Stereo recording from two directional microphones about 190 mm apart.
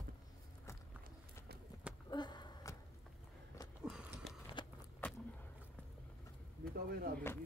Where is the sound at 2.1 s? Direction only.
20° left (ahead or behind).